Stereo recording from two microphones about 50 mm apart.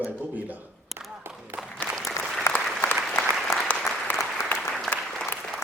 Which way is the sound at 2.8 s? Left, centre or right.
Left.